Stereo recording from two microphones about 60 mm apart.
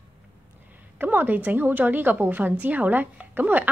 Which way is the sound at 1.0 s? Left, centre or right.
Right.